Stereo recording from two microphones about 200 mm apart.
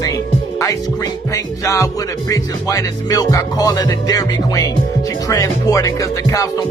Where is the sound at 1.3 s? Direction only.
15° left (ahead or behind).